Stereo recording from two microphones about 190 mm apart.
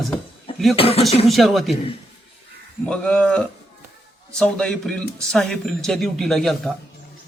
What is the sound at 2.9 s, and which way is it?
A man's voice, 5° left (ahead or behind).